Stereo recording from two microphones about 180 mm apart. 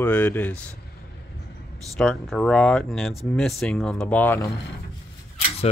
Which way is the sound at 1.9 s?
Centre (ahead or behind).